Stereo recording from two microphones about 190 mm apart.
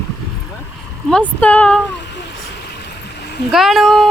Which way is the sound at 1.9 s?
65° left (ahead or behind).